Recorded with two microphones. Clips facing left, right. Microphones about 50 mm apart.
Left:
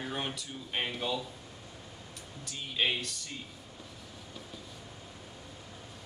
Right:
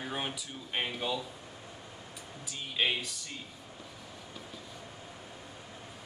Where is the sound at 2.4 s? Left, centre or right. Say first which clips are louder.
Even; centre.